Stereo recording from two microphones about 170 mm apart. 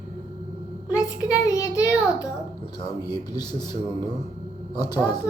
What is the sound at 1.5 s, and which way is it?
Speech, 20° left (ahead or behind).